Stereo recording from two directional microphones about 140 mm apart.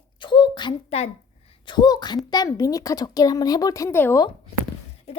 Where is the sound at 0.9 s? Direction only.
50° left (ahead or behind).